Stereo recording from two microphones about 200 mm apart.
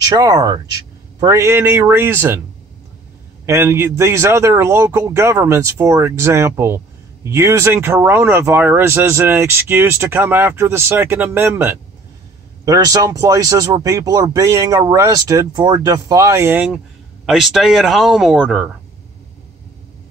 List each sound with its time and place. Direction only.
0.1 s speech: 20° right (ahead or behind)
3.4 s speech: 10° right (ahead or behind)